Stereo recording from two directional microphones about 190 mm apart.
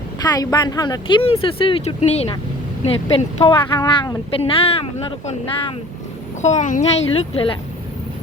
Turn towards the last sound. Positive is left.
turn(degrees=30)  # may be behind; listen again after turning